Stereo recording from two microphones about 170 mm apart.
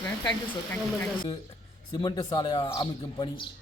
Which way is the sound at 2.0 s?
25° left (ahead or behind).